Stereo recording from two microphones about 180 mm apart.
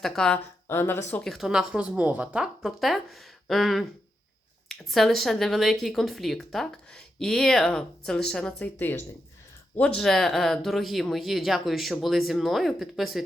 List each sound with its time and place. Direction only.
0.0 s speech: 5° left (ahead or behind)
1.1 s speech: centre (ahead or behind)